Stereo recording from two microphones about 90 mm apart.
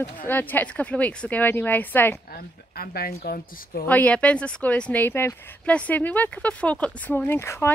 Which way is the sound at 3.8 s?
20° left (ahead or behind).